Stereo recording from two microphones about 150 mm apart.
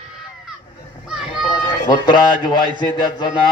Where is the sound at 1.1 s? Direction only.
5° right (ahead or behind).